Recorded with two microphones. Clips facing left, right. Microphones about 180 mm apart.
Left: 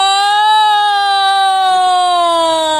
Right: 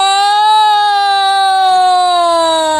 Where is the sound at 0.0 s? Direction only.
10° right (ahead or behind).